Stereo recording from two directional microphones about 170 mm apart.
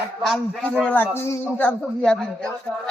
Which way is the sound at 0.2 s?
Centre (ahead or behind).